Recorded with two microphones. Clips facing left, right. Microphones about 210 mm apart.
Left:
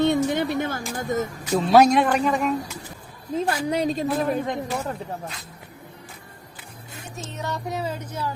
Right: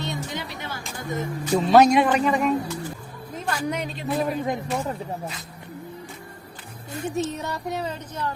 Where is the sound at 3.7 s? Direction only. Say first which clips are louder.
Left 6 dB; 35° left (ahead or behind).